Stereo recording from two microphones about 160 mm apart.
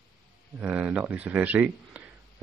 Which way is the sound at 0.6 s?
10° right (ahead or behind).